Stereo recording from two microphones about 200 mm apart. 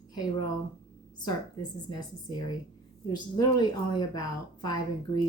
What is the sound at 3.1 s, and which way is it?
A woman's voice, 20° left (ahead or behind).